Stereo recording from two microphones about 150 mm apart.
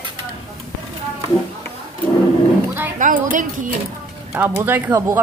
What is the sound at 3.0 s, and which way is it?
Speech, 60° right (ahead or behind).